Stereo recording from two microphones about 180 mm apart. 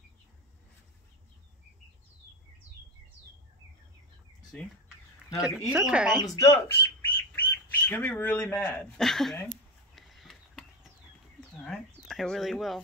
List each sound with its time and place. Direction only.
4.5 s speech: 5° left (ahead or behind)
6.1 s speech: 20° left (ahead or behind); by 9.4 s centre (ahead or behind)
9.9 s a sound: centre (ahead or behind)